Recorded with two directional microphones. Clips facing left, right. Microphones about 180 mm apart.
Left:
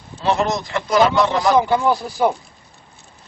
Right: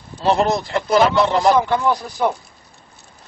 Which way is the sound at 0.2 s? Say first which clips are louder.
Right 2 dB; 35° right (ahead or behind).